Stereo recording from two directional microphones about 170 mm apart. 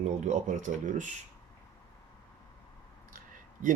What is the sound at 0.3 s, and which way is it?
Speech, 45° right (ahead or behind).